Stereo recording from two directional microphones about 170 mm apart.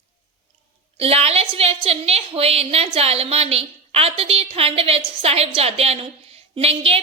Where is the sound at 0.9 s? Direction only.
35° right (ahead or behind).